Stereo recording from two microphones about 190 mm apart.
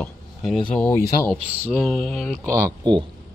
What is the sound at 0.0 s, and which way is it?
Speech, 5° left (ahead or behind).